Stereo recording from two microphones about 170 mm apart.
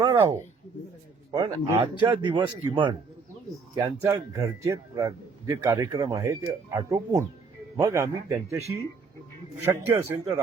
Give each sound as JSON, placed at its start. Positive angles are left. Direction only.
{"t": 0.0, "sound": "speech", "side_deg": -20}
{"t": 3.8, "sound": "speech", "side_deg": -15}
{"t": 6.2, "sound": "speech", "side_deg": -15}
{"t": 9.6, "sound": "speech", "side_deg": -15}